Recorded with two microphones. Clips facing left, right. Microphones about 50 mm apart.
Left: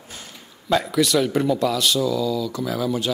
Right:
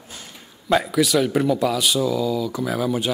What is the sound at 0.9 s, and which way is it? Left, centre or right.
Speech, centre.